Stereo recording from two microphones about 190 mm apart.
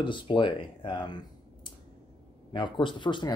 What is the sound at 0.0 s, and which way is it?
Speech, 25° left (ahead or behind).